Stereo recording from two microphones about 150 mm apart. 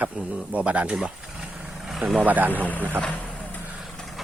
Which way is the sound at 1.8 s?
Centre (ahead or behind).